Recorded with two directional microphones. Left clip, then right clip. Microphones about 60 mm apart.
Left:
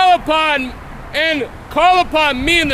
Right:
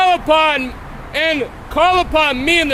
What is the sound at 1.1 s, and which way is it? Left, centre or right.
Speech, left.